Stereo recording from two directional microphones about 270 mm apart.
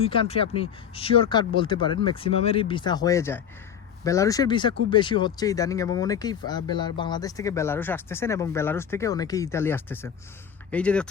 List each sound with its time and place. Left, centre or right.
0.0 s speech: left; by 11.1 s centre